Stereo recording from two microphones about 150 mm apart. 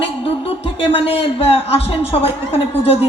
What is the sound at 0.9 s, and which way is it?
Speech, 40° left (ahead or behind).